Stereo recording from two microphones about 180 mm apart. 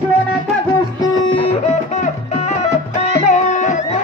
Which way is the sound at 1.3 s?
35° left (ahead or behind).